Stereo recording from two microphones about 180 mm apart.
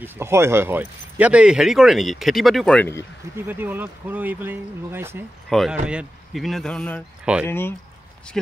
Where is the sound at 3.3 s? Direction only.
10° right (ahead or behind).